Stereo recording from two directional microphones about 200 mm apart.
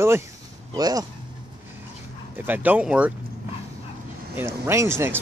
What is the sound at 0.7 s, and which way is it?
Speech, 20° right (ahead or behind).